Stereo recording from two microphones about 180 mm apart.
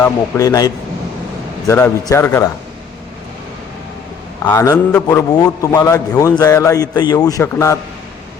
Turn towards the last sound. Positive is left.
turn(degrees=15)  # may be behind; listen again after turning